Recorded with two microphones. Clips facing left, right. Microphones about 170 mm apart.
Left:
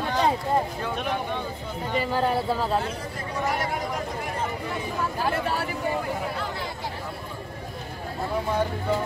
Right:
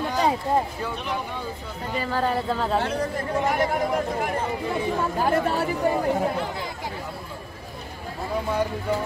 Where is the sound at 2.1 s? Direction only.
10° left (ahead or behind).